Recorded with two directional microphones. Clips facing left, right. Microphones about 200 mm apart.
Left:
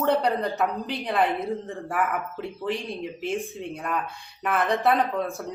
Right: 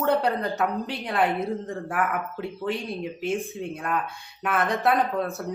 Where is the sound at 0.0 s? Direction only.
Centre (ahead or behind).